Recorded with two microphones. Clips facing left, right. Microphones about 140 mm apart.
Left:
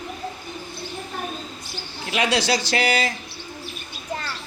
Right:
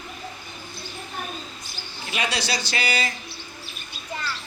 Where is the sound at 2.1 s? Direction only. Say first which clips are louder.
Left 6 dB; 90° left.